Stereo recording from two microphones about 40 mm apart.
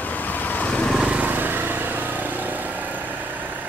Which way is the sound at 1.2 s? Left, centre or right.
Right.